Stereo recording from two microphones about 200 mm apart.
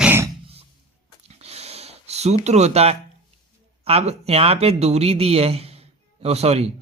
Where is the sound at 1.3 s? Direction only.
30° right (ahead or behind).